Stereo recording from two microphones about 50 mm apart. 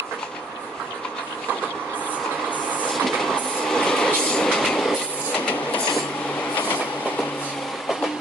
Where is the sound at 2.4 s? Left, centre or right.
Left.